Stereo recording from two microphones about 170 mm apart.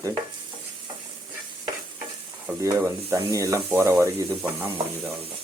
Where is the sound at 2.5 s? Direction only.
15° right (ahead or behind).